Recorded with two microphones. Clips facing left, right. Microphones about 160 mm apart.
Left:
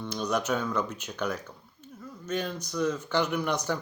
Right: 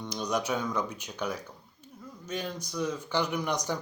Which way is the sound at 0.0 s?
15° right (ahead or behind).